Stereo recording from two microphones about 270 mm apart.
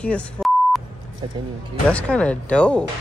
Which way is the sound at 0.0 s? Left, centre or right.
Centre.